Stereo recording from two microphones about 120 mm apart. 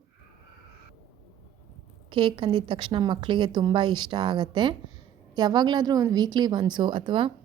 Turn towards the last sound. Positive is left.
turn(degrees=-40)  # may be behind; listen again after turning